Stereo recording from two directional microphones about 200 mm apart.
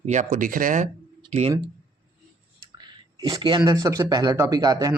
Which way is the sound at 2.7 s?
20° right (ahead or behind).